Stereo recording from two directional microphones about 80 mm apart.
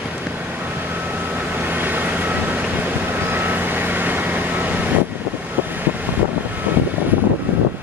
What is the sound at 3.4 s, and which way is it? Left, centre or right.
Vehicle, right.